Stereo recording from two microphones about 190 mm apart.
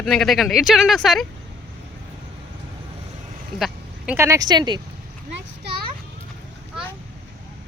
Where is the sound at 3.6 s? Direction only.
10° right (ahead or behind).